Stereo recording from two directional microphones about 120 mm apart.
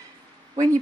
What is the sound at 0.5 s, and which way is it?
Speech, 25° right (ahead or behind).